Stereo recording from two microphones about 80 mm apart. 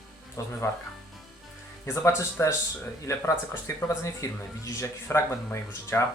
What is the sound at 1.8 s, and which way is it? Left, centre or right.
Speech, left.